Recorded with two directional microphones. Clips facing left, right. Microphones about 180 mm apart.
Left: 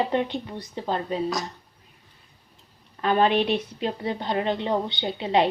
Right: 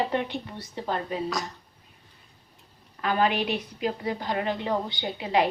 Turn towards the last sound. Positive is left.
turn(degrees=25)  # may be behind; listen again after turning